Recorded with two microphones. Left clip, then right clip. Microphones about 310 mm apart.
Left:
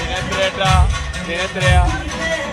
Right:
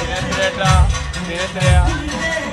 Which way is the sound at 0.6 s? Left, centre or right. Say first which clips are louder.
Left 1 dB; left.